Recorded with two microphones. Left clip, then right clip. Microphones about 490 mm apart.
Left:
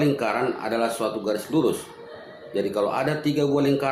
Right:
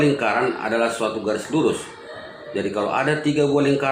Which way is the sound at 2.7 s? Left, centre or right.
Left.